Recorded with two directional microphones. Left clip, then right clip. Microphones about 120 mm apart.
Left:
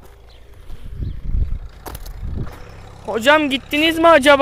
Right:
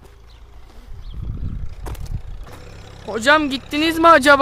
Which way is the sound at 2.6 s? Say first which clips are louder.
Left 1 dB; 5° right (ahead or behind).